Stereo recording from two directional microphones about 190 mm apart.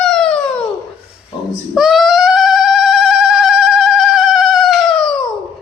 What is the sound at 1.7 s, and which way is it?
Music, centre (ahead or behind).